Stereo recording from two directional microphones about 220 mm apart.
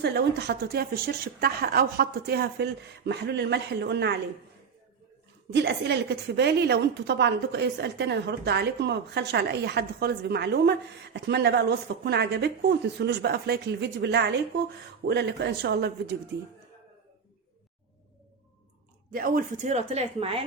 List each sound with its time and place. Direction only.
0.0 s a woman's voice: 50° right (ahead or behind)
5.5 s a woman's voice: 50° right (ahead or behind)
19.1 s speech: 40° right (ahead or behind)